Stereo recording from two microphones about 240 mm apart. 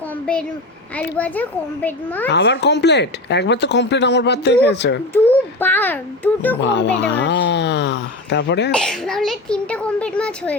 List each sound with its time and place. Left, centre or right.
0.3 s a child's voice: centre
2.3 s speech: left
5.1 s a child's voice: centre
6.6 s speech: left
8.7 s a child's voice: centre